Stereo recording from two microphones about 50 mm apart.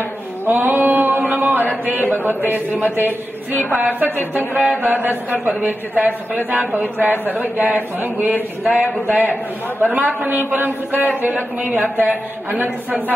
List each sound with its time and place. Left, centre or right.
0.5 s a sound: right
2.2 s speech: right
9.1 s a man's voice: left
9.8 s speech: right